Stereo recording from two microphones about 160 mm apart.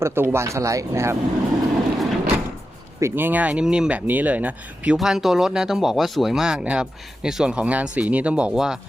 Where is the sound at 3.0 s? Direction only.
10° right (ahead or behind).